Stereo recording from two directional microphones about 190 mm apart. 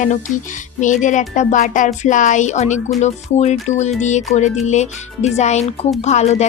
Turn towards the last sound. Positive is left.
turn(degrees=35)  # may be behind; listen again after turning